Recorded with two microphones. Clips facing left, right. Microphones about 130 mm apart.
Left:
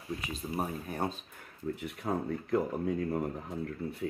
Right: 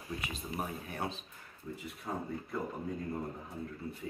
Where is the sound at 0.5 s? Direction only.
40° left (ahead or behind).